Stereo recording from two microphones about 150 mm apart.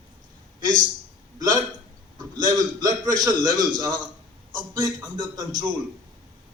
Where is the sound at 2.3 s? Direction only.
25° right (ahead or behind).